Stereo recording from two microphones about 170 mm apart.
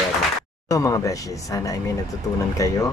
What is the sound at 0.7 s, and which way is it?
Speech, 20° left (ahead or behind).